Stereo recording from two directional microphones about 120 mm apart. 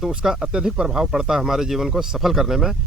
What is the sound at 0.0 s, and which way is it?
Speech, 5° right (ahead or behind).